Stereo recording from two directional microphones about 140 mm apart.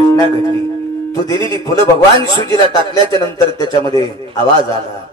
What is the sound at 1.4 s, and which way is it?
A man's voice, 35° right (ahead or behind).